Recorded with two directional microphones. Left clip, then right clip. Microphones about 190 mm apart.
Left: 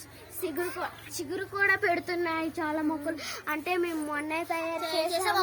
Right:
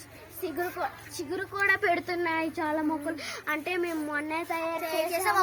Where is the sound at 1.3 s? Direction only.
10° left (ahead or behind).